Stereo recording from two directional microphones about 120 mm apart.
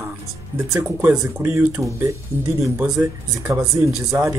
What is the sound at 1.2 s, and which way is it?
Speech, 25° right (ahead or behind).